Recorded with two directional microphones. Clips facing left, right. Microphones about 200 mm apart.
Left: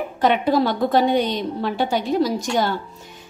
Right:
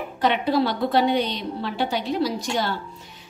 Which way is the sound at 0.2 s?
45° left (ahead or behind).